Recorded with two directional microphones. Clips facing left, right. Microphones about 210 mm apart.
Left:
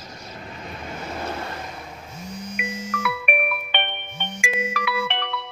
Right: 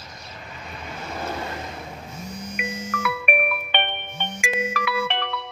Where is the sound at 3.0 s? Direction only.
45° right (ahead or behind).